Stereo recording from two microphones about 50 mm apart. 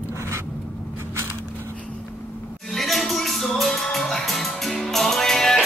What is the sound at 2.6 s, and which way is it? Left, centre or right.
Music, centre.